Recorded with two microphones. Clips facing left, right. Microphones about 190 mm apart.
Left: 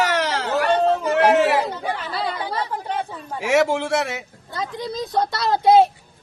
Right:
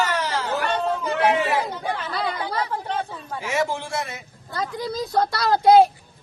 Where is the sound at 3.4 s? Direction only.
75° left (ahead or behind).